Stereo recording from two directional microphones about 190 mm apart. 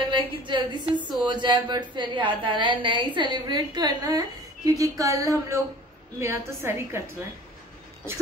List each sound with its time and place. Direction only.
0.0 s a woman's voice: 25° right (ahead or behind)